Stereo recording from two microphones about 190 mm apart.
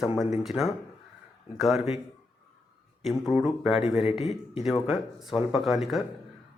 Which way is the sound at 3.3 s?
5° right (ahead or behind).